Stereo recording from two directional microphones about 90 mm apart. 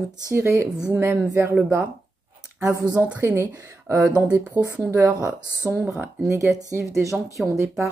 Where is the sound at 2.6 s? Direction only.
40° right (ahead or behind).